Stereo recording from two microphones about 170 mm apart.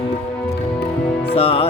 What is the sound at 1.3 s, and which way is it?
Music, 35° left (ahead or behind).